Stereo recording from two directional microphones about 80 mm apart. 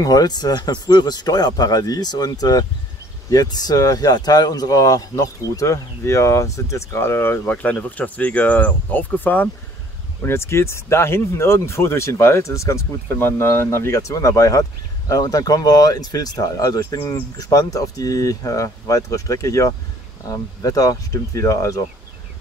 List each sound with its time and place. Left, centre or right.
0.0 s speech: left
10.2 s speech: left